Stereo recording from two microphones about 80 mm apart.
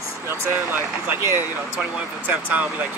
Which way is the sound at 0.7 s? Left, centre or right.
Right.